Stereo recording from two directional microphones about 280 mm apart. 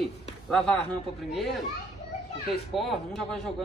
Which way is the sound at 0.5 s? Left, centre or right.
Centre.